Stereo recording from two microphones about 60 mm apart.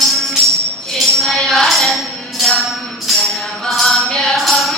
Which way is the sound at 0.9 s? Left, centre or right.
Centre.